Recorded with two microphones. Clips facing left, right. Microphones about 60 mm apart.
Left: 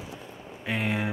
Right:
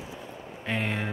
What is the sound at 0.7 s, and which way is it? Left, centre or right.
Speech, centre.